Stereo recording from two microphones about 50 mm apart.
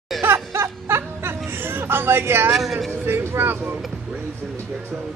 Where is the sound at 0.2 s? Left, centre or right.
Right.